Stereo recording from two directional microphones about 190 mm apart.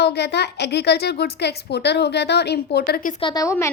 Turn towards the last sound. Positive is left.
turn(degrees=20)  # may be behind; listen again after turning